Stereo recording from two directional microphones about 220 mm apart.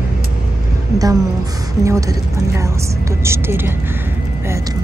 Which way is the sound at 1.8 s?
15° right (ahead or behind).